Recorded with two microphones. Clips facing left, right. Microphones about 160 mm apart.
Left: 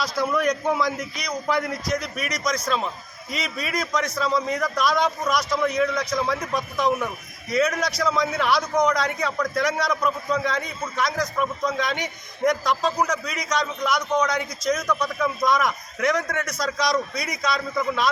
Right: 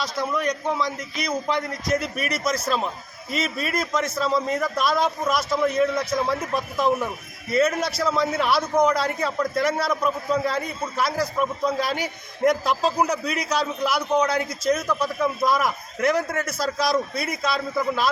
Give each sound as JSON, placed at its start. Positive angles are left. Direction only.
{"t": 0.0, "sound": "a man's voice", "side_deg": 0}
{"t": 1.9, "sound": "a man's voice", "side_deg": -5}